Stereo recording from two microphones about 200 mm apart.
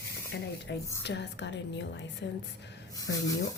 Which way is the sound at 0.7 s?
60° left (ahead or behind).